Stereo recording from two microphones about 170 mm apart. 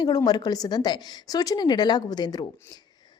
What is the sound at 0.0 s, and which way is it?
A woman's voice, 25° left (ahead or behind).